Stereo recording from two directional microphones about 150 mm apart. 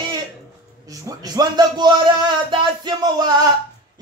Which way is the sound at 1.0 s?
25° right (ahead or behind).